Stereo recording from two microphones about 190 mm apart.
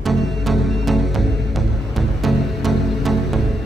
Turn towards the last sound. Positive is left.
turn(degrees=0)  # may be behind; listen again after turning